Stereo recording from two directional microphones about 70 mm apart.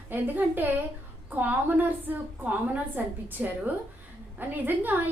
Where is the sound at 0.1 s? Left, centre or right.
Right.